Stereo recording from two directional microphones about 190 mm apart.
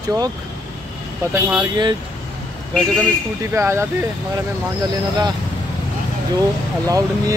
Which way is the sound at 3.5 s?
15° right (ahead or behind).